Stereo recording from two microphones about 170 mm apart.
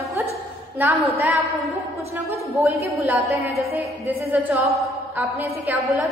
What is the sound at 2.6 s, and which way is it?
A woman's voice, 15° right (ahead or behind).